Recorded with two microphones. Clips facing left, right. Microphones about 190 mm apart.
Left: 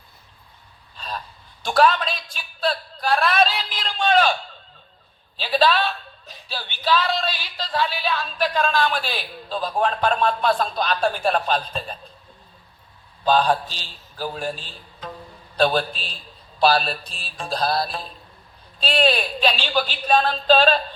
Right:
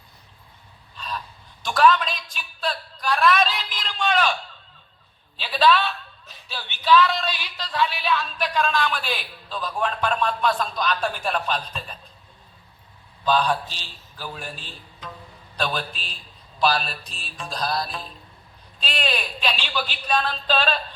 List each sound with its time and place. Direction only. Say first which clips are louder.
0.9 s a sound: even; 35° left (ahead or behind)
1.6 s speech: left 1 dB; 35° left (ahead or behind)
5.4 s speech: left 1 dB; 35° left (ahead or behind)
13.2 s speech: left 3 dB; 35° left (ahead or behind)